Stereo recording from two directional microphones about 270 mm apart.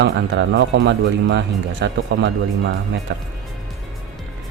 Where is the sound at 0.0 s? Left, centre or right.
Right.